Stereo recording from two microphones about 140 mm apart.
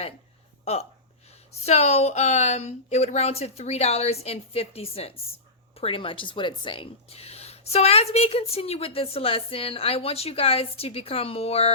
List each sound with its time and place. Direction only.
0.6 s speech: 50° left (ahead or behind)